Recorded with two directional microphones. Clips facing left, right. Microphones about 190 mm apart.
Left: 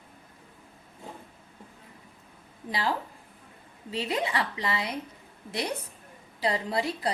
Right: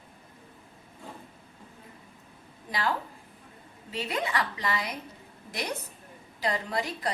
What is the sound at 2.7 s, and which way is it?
A woman's voice, 30° left (ahead or behind).